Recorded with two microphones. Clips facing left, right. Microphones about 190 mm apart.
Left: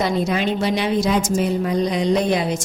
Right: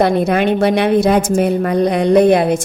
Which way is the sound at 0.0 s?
60° right (ahead or behind).